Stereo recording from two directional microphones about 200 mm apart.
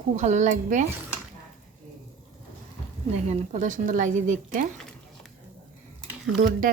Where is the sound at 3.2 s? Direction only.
35° right (ahead or behind).